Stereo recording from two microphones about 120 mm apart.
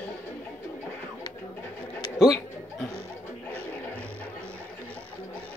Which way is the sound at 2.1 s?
Centre (ahead or behind).